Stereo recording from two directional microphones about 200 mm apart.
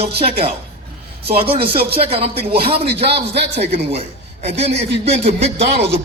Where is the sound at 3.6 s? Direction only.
30° right (ahead or behind).